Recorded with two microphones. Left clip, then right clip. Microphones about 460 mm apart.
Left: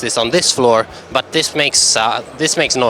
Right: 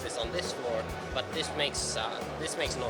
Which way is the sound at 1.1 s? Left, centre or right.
Left.